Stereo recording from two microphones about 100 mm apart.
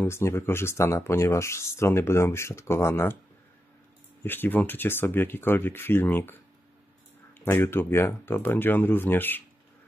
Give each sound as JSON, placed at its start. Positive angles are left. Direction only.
{"t": 0.0, "sound": "speech", "side_deg": 25}
{"t": 4.2, "sound": "speech", "side_deg": 20}
{"t": 7.4, "sound": "speech", "side_deg": 20}